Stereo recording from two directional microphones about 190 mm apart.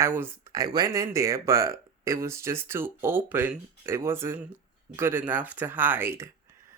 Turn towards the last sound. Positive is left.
turn(degrees=-15)  # may be behind; listen again after turning